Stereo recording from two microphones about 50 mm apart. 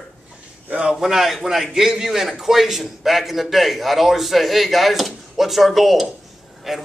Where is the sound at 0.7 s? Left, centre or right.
Right.